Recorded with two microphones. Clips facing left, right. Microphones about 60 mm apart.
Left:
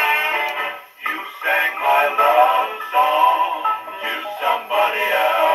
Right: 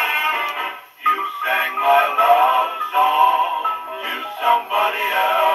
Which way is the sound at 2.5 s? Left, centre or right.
Left.